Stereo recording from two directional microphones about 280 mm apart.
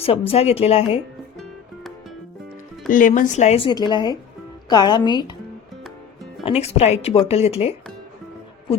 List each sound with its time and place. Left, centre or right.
0.0 s speech: left
2.9 s speech: left
6.4 s speech: left